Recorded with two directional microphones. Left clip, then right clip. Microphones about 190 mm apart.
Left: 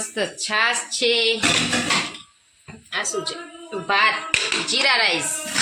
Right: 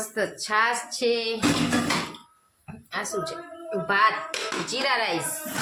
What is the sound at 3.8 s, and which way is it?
Speech, 15° left (ahead or behind).